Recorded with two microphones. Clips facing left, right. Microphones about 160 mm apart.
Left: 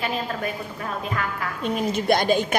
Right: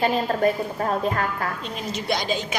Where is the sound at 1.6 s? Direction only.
50° left (ahead or behind).